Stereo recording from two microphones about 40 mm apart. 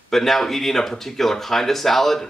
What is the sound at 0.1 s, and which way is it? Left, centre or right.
Speech, centre.